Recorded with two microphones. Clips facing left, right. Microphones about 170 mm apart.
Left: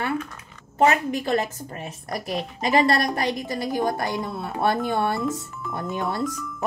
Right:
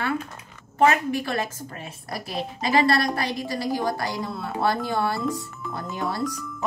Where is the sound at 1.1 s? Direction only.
20° left (ahead or behind).